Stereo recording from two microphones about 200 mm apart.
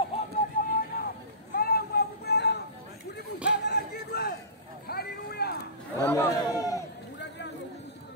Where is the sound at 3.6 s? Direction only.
55° left (ahead or behind).